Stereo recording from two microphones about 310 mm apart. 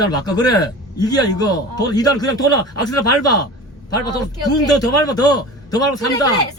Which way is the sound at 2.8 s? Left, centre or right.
Left.